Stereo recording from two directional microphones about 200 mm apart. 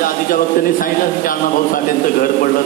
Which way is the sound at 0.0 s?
45° left (ahead or behind).